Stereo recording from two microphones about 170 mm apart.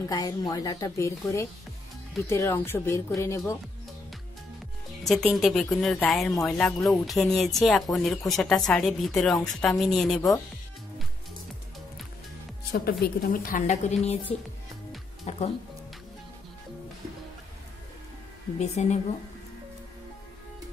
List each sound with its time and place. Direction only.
0.0 s speech: 20° left (ahead or behind)
5.0 s a woman's voice: centre (ahead or behind)
13.0 s a woman's voice: 55° left (ahead or behind); by 15.5 s 40° left (ahead or behind)
18.6 s speech: 40° left (ahead or behind)